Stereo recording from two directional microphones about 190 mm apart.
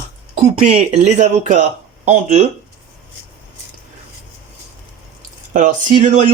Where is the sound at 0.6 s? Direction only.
35° right (ahead or behind).